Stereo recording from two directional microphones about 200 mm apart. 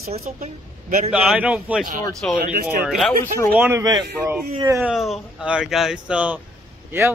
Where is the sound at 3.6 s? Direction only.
15° right (ahead or behind).